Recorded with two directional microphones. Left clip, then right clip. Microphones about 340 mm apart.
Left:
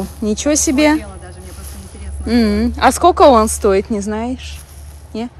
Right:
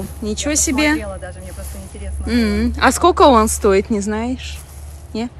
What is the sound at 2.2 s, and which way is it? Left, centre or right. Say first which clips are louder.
A woman's voice: left 3 dB; centre.